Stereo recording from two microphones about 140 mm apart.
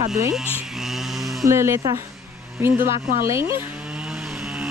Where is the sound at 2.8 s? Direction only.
80° right.